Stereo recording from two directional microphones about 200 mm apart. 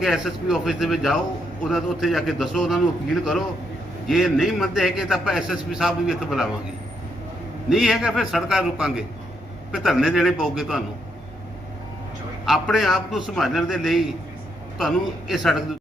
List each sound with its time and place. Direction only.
0.0 s a man's voice: centre (ahead or behind)
7.7 s a man's voice: centre (ahead or behind)
12.5 s a man's voice: centre (ahead or behind)